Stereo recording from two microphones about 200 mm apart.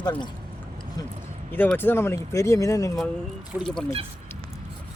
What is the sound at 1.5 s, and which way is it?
Speech, 10° left (ahead or behind).